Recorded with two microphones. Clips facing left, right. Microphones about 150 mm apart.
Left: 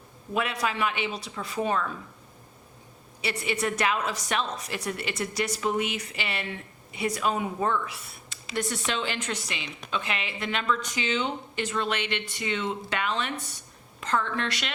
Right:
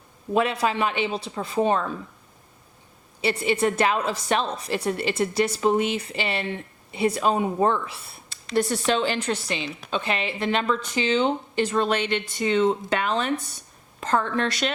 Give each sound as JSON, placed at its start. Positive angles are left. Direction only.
{"t": 0.3, "sound": "a woman's voice", "side_deg": -30}
{"t": 3.2, "sound": "a woman's voice", "side_deg": -30}